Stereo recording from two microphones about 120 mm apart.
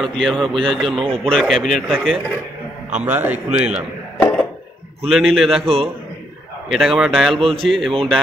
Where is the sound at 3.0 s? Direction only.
15° right (ahead or behind).